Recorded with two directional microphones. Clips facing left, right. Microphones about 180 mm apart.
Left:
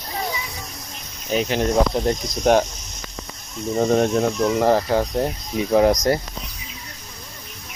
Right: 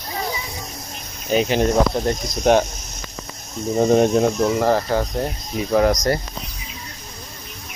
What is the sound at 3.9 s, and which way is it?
Speech, 5° right (ahead or behind).